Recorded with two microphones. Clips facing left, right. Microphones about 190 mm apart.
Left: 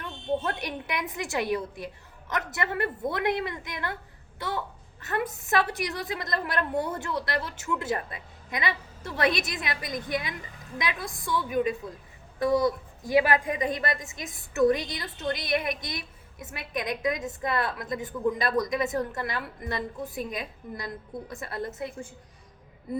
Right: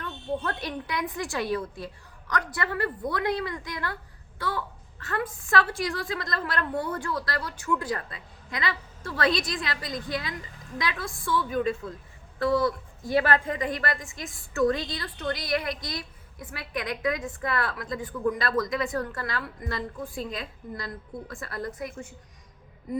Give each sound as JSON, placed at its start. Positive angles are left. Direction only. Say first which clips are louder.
{"t": 0.0, "sound": "a woman's voice", "louder": "left 2 dB", "side_deg": 20}